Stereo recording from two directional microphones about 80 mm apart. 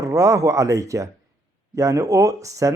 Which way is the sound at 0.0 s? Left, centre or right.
Right.